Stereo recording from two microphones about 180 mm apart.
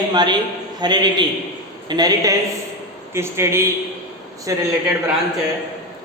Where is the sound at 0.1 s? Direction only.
25° right (ahead or behind).